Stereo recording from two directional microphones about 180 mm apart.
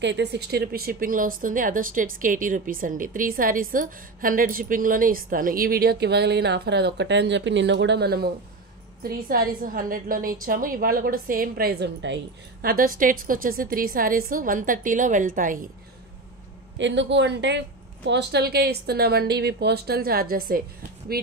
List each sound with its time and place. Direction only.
0.0 s speech: 75° right (ahead or behind)
12.6 s speech: 50° right (ahead or behind)
16.7 s a woman's voice: 90° right; by 20.6 s 55° right (ahead or behind)